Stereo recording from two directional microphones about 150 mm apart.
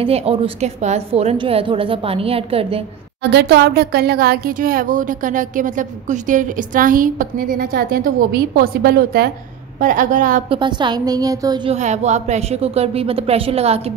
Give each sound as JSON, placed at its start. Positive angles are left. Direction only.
{"t": 0.0, "sound": "a woman's voice", "side_deg": -40}
{"t": 3.2, "sound": "speech", "side_deg": -90}
{"t": 9.8, "sound": "a woman's voice", "side_deg": -65}
{"t": 10.5, "sound": "a woman's voice", "side_deg": -30}
{"t": 11.7, "sound": "a woman's voice", "side_deg": -50}